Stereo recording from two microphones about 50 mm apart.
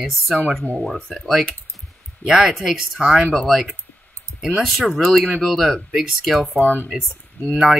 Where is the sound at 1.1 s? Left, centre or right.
Centre.